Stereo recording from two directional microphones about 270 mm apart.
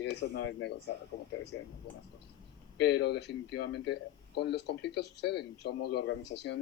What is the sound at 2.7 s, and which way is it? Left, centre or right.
Speech, left.